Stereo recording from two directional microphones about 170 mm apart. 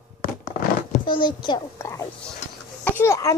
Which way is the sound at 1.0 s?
30° left (ahead or behind).